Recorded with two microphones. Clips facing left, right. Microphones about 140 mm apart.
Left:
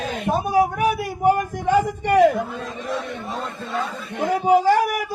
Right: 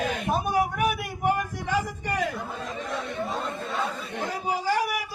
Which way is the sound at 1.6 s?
55° left (ahead or behind).